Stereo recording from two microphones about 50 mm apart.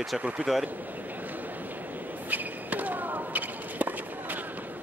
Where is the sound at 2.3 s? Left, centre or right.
Right.